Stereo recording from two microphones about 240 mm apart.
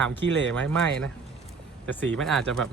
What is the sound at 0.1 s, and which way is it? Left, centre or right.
Speech, centre.